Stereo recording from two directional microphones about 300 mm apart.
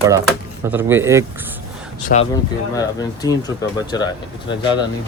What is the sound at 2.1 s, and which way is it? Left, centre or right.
Speech, left.